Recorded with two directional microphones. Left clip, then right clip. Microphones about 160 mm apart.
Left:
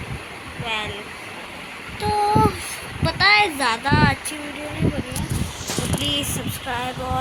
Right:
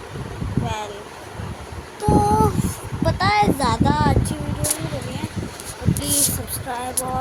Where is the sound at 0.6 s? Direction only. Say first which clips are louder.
Left 3 dB; 20° right (ahead or behind).